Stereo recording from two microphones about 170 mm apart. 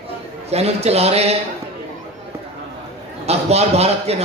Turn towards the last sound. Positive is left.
turn(degrees=-40)  # may be behind; listen again after turning